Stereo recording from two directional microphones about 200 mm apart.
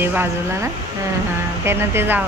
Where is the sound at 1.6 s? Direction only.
10° right (ahead or behind).